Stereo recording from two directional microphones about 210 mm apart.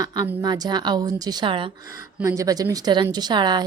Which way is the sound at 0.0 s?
15° right (ahead or behind).